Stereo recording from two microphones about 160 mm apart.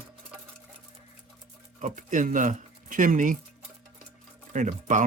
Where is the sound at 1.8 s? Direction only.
50° right (ahead or behind).